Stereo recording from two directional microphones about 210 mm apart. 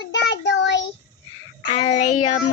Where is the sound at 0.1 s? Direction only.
55° left (ahead or behind).